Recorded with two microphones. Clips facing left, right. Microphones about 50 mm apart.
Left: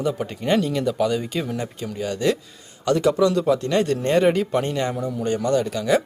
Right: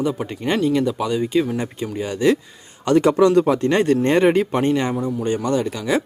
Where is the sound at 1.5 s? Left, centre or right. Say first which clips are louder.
Right 3 dB; right.